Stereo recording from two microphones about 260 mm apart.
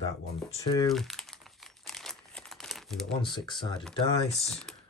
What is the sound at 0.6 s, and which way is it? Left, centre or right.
Speech, centre.